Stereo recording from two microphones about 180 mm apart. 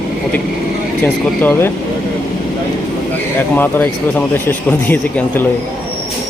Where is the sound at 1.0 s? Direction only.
10° left (ahead or behind).